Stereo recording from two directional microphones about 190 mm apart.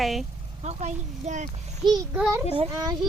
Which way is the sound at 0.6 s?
40° right (ahead or behind).